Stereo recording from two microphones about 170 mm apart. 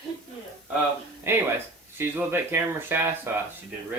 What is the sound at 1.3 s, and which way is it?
Speech, 15° right (ahead or behind).